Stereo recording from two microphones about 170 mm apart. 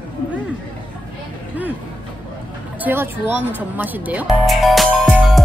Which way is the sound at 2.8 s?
10° right (ahead or behind).